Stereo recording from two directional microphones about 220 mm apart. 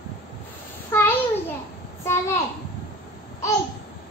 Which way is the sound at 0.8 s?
10° left (ahead or behind).